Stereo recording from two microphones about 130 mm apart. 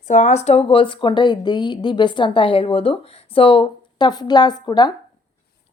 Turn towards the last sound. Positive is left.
turn(degrees=35)  # may be behind; listen again after turning